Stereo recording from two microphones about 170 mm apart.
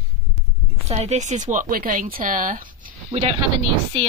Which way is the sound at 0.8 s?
40° right (ahead or behind).